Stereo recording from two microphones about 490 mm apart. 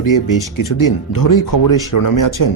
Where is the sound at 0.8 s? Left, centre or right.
Left.